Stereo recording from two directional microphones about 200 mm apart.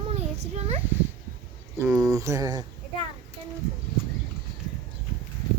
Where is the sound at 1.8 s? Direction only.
15° right (ahead or behind).